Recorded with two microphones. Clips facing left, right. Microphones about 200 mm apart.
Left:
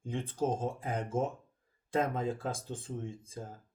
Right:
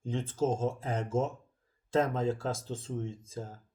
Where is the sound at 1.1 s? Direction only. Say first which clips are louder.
Right 2 dB; 55° left (ahead or behind).